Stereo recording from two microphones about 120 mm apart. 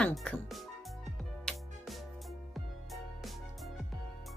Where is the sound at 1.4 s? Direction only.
Centre (ahead or behind).